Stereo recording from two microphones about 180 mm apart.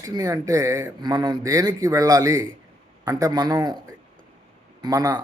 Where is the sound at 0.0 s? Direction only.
20° right (ahead or behind).